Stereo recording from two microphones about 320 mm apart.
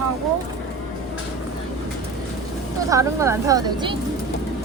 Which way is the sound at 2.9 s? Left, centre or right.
Centre.